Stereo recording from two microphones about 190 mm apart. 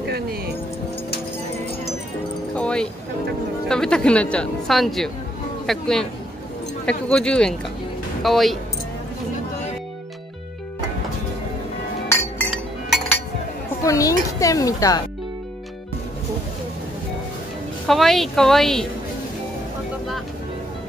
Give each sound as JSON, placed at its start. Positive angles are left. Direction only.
{"t": 0.0, "sound": "music", "side_deg": -60}
{"t": 2.5, "sound": "a sound", "side_deg": 5}
{"t": 3.6, "sound": "speech", "side_deg": 5}
{"t": 12.1, "sound": "chink", "side_deg": 15}
{"t": 13.8, "sound": "speech", "side_deg": 15}
{"t": 17.8, "sound": "speech", "side_deg": 0}